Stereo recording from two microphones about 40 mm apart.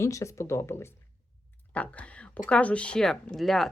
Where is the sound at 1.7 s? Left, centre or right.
Left.